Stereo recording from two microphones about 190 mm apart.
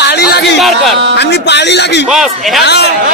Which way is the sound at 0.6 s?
Centre (ahead or behind).